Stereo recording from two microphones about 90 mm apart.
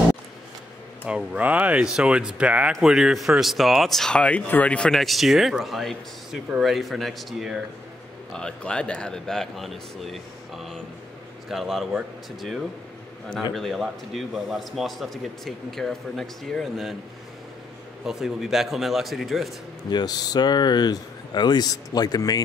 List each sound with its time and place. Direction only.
1.0 s a man's voice: 10° right (ahead or behind)
8.3 s speech: 10° left (ahead or behind)
11.5 s a man's voice: centre (ahead or behind)
18.0 s a man's voice: 5° right (ahead or behind)
19.9 s speech: 50° left (ahead or behind)